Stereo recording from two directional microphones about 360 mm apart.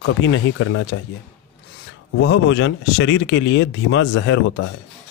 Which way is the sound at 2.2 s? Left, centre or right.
Left.